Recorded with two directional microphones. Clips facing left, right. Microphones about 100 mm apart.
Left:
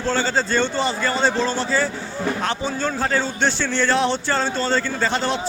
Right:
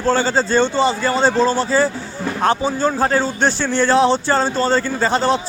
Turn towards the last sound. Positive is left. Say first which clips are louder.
# right 5 dB
turn(degrees=-35)  # may be behind; listen again after turning